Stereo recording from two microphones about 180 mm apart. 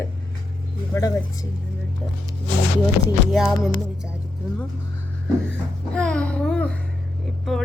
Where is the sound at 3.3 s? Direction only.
Centre (ahead or behind).